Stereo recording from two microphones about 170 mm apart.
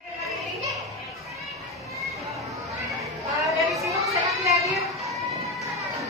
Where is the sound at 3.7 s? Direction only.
20° right (ahead or behind).